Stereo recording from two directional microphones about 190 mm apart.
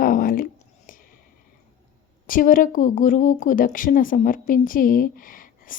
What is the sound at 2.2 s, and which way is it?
A woman's voice, 45° left (ahead or behind).